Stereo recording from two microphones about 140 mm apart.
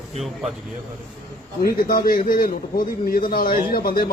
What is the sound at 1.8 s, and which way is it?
A man's voice, 90° left.